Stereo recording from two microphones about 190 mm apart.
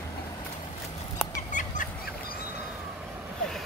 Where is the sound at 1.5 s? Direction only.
40° left (ahead or behind).